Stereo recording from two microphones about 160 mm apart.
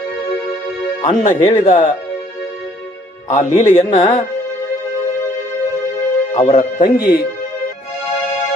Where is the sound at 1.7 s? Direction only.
50° left (ahead or behind).